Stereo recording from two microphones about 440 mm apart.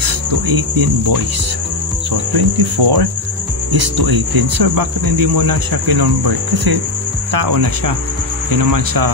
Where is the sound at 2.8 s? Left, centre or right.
Right.